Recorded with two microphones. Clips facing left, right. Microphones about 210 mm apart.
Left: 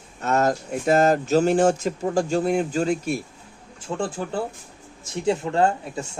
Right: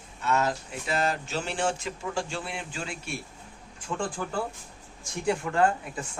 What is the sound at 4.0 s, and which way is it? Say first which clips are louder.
Speech: left 5 dB; 25° left (ahead or behind).